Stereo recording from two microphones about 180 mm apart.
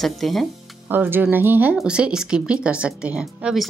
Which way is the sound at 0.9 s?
10° right (ahead or behind).